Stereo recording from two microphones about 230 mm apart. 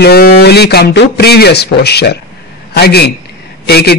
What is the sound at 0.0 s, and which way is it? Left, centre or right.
Speech, left.